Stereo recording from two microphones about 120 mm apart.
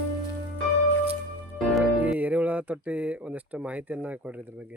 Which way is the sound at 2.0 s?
10° right (ahead or behind).